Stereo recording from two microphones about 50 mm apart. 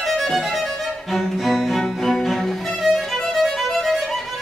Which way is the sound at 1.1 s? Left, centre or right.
Centre.